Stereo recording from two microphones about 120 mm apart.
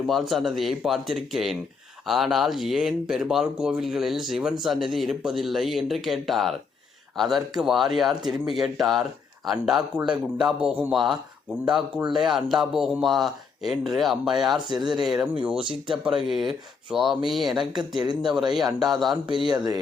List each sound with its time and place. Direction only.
0.1 s speech: centre (ahead or behind)
17.7 s speech: 35° right (ahead or behind)
18.2 s speech: 5° right (ahead or behind)
19.5 s speech: 35° right (ahead or behind)